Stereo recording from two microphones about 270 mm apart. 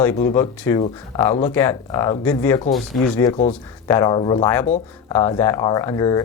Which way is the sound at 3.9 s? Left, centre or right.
Centre.